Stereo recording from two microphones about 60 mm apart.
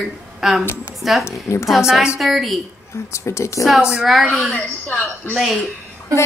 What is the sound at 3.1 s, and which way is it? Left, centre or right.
Speech, left.